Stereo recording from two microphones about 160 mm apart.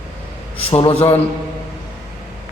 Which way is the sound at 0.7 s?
35° left (ahead or behind).